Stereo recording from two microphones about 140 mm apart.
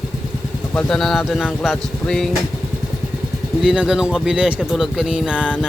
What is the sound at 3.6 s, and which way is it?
Speech, 5° right (ahead or behind).